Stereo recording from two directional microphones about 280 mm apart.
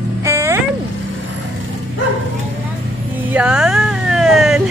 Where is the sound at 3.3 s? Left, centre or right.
Centre.